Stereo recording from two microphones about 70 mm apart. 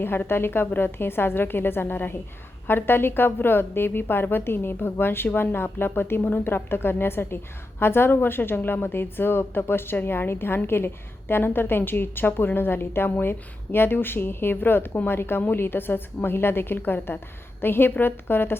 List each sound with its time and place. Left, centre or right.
0.0 s a woman's voice: left